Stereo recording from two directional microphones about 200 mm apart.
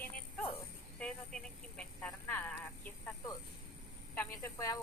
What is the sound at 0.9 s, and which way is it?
Vehicle, 5° left (ahead or behind).